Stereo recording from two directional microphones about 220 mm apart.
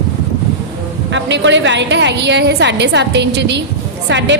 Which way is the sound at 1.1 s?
55° right (ahead or behind).